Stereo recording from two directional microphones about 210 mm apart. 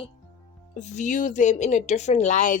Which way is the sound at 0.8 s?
35° left (ahead or behind).